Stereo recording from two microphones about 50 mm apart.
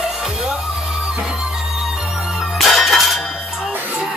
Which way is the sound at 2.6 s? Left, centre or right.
Centre.